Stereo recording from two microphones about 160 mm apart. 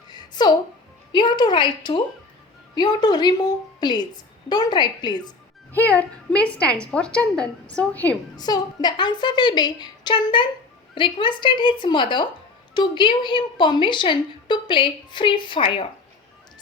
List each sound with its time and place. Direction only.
0.1 s music: 25° left (ahead or behind)
1.1 s a woman's voice: 30° left (ahead or behind)
5.7 s a woman's voice: 10° left (ahead or behind)
8.4 s a woman's voice: 25° left (ahead or behind)